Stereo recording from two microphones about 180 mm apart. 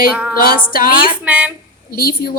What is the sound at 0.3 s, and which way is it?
Music, 50° left (ahead or behind).